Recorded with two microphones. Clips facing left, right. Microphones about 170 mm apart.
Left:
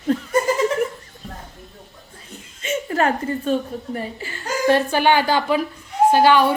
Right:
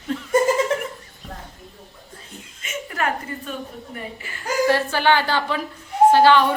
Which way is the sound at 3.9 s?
30° left (ahead or behind).